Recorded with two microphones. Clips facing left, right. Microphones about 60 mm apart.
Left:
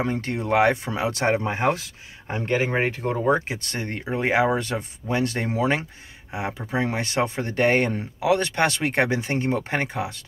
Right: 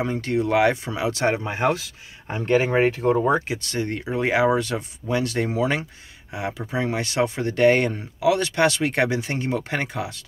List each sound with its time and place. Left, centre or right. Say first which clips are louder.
0.0 s speech: right 3 dB; left
2.2 s speech: right 3 dB; centre
3.0 s speech: right 6 dB; right
3.4 s speech: right 4 dB; left